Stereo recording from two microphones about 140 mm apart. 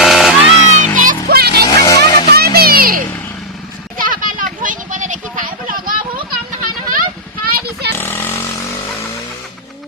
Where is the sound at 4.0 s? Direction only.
80° right; by 5.2 s 65° right (ahead or behind).